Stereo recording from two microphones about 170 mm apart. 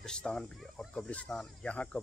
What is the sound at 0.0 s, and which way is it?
Speech, 5° left (ahead or behind).